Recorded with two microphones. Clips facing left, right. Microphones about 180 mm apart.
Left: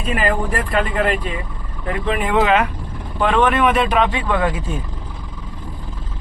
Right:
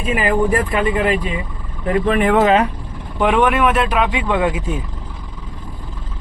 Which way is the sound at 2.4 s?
35° right (ahead or behind).